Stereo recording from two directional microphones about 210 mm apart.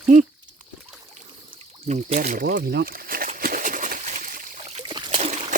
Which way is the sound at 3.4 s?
40° right (ahead or behind).